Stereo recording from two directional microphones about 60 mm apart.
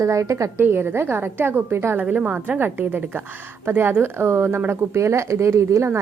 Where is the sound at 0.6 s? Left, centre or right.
Right.